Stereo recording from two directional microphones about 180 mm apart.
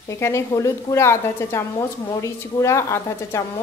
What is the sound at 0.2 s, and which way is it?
A woman's voice, 15° left (ahead or behind).